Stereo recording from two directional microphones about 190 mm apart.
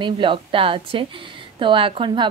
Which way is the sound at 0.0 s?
25° right (ahead or behind).